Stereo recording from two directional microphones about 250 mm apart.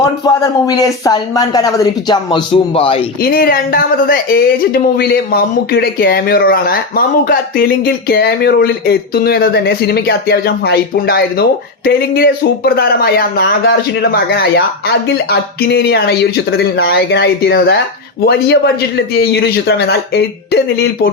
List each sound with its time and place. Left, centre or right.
0.2 s speech: centre
3.2 s speech: left